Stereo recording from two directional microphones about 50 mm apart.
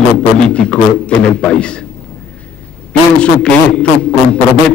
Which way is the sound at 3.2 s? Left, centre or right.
Left.